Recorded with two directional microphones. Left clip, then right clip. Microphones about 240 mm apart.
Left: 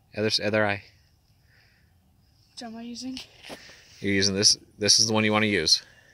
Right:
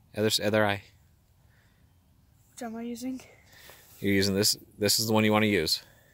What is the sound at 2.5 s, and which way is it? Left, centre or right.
Speech, right.